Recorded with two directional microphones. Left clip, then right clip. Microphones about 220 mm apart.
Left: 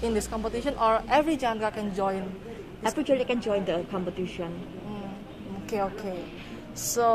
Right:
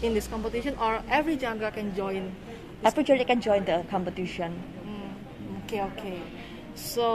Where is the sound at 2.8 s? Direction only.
35° right (ahead or behind).